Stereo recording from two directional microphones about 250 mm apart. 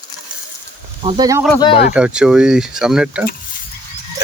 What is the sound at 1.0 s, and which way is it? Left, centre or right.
Speech, centre.